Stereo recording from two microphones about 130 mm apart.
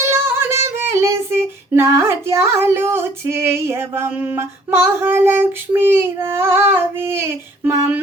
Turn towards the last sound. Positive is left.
turn(degrees=-20)  # may be behind; listen again after turning